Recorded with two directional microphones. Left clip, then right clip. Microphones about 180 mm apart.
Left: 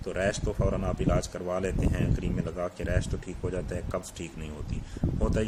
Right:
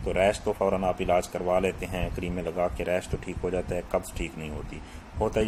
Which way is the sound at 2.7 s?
20° left (ahead or behind).